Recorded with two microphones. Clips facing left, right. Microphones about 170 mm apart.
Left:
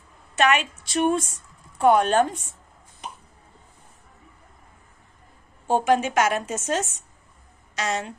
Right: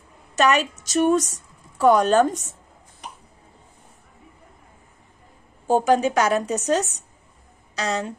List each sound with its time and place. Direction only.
0.4 s a woman's voice: 40° right (ahead or behind)
5.7 s a woman's voice: 40° right (ahead or behind)